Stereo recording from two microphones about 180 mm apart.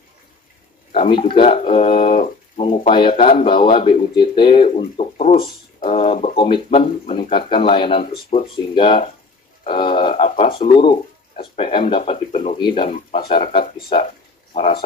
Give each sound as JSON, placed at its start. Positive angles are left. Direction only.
{"t": 1.1, "sound": "speech", "side_deg": 30}
{"t": 13.9, "sound": "speech", "side_deg": 30}